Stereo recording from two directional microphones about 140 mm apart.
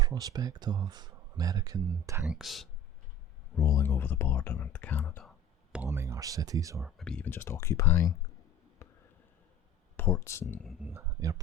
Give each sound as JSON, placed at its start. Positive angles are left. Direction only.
{"t": 0.0, "sound": "speech", "side_deg": -25}
{"t": 2.2, "sound": "speech", "side_deg": 0}
{"t": 3.5, "sound": "speech", "side_deg": 20}
{"t": 5.7, "sound": "speech", "side_deg": -15}
{"t": 6.8, "sound": "speech", "side_deg": 5}
{"t": 8.8, "sound": "a sound", "side_deg": 20}
{"t": 10.0, "sound": "speech", "side_deg": 20}
{"t": 10.8, "sound": "speech", "side_deg": -20}